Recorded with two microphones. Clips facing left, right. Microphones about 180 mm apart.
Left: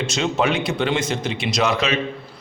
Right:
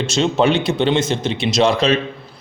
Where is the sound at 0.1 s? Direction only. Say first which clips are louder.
Right 6 dB; 30° right (ahead or behind).